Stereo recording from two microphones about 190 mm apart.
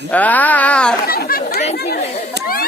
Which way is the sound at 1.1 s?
50° left (ahead or behind).